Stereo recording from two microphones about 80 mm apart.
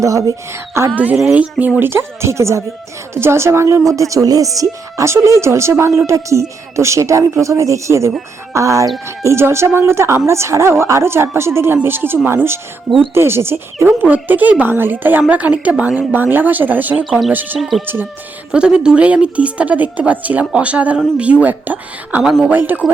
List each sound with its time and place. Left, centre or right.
0.0 s speech: right
1.1 s a woman's voice: centre
1.8 s a woman's voice: right
17.0 s speech: centre
17.8 s speech: right
18.5 s a woman's voice: centre
22.2 s speech: centre
22.4 s speech: right